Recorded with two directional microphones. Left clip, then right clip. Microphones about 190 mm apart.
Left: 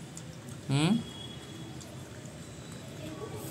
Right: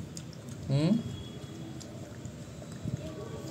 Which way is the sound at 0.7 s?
10° left (ahead or behind).